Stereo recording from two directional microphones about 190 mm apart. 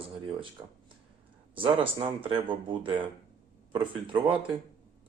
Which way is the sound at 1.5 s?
25° right (ahead or behind).